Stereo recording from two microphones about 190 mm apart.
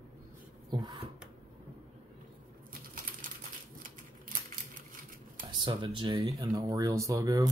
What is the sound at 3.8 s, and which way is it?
Typewriter, 45° right (ahead or behind).